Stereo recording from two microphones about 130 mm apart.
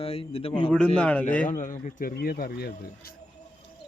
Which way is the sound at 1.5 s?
80° left.